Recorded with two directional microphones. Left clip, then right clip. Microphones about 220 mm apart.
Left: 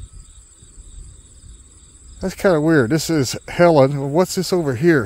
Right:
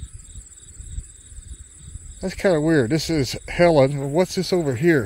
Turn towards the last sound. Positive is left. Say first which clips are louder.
# left 3 dB
turn(degrees=10)  # may be behind; listen again after turning